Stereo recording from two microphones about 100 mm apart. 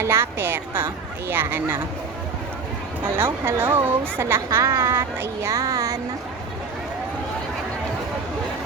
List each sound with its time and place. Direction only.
0.0 s speech: 25° right (ahead or behind)
3.0 s speech: 20° right (ahead or behind)